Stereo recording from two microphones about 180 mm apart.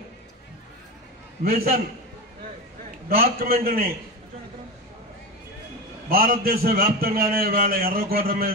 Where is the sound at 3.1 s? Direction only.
55° right (ahead or behind).